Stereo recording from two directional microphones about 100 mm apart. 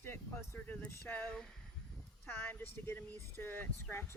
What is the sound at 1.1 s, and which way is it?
Speech, 10° left (ahead or behind).